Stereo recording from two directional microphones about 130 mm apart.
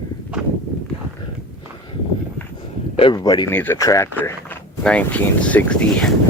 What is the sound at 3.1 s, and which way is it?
Speech, 30° left (ahead or behind).